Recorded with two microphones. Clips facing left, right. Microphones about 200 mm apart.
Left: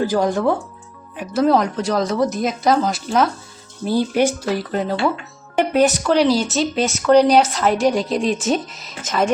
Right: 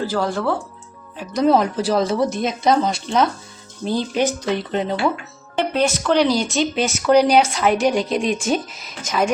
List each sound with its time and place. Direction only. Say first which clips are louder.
0.0 s a woman's voice: left 4 dB; 15° left (ahead or behind)
1.2 s a woman's voice: even; 5° left (ahead or behind)
4.7 s speech: even; 20° right (ahead or behind)
5.8 s speech: left 1 dB; 5° left (ahead or behind)